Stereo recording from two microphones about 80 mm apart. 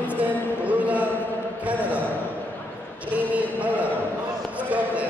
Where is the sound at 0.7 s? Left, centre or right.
Centre.